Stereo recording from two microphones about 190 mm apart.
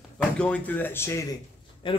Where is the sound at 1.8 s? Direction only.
25° left (ahead or behind).